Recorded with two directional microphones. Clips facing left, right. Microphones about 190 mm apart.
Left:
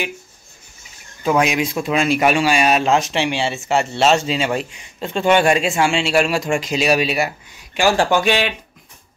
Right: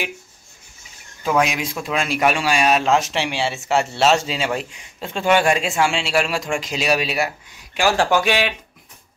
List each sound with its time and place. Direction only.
1.2 s speech: centre (ahead or behind)